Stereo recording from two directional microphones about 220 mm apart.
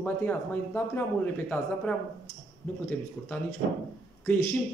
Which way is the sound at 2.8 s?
5° left (ahead or behind).